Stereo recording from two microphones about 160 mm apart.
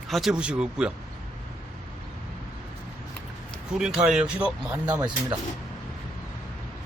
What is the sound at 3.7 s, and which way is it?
Speech, 5° right (ahead or behind).